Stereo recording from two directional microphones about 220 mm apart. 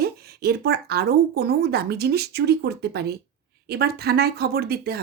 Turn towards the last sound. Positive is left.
turn(degrees=-45)  # may be behind; listen again after turning